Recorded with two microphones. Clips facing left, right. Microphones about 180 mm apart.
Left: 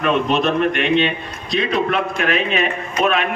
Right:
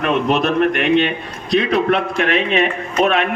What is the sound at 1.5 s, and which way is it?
Speech, 60° right (ahead or behind).